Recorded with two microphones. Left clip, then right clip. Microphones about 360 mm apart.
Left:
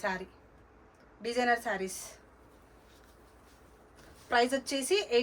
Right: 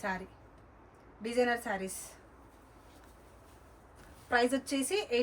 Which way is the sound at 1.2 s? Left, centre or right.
Centre.